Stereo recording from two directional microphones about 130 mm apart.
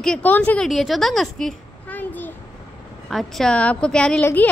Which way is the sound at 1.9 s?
15° left (ahead or behind).